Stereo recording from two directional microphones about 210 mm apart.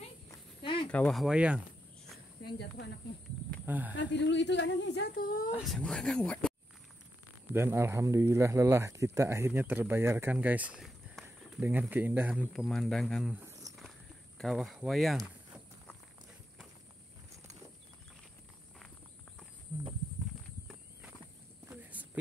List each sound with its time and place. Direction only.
0.3 s walk: 25° left (ahead or behind)
0.8 s speech: 5° left (ahead or behind)
2.4 s speech: 50° left (ahead or behind)
3.6 s speech: 10° right (ahead or behind)
3.9 s speech: 60° left (ahead or behind); by 5.5 s 40° left (ahead or behind)
5.6 s speech: centre (ahead or behind)
7.5 s speech: 10° right (ahead or behind)
13.5 s a sound: 15° right (ahead or behind)
14.4 s speech: centre (ahead or behind)
21.9 s a sound: 5° right (ahead or behind)